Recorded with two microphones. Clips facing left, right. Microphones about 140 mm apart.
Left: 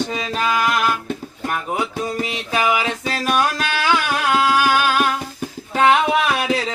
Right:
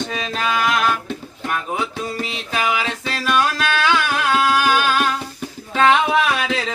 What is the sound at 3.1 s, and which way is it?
Music, 40° left (ahead or behind).